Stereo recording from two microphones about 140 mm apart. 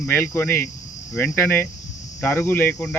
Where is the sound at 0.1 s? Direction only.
15° left (ahead or behind).